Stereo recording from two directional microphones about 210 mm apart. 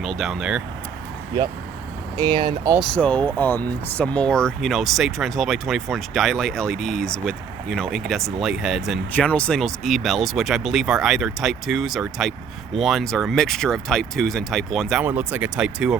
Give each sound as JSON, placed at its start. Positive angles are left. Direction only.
{"t": 0.0, "sound": "speech", "side_deg": 0}
{"t": 2.1, "sound": "speech", "side_deg": -20}
{"t": 2.7, "sound": "speech", "side_deg": 5}